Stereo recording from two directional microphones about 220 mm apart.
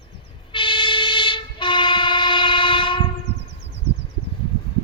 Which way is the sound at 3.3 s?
50° right (ahead or behind).